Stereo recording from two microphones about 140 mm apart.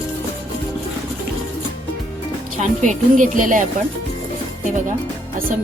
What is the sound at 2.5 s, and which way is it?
Speech, 60° right (ahead or behind).